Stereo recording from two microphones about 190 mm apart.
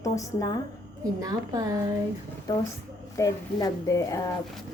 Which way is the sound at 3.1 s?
20° left (ahead or behind).